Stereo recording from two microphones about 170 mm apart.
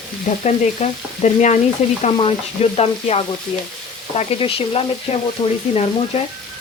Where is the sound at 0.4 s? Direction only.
45° left (ahead or behind).